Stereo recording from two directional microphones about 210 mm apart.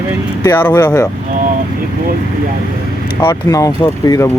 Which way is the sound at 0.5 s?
10° left (ahead or behind).